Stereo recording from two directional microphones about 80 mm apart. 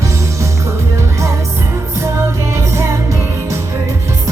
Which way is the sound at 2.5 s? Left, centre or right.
Right.